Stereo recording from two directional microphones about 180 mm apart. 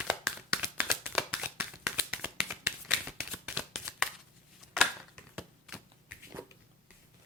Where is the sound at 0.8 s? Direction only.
10° right (ahead or behind).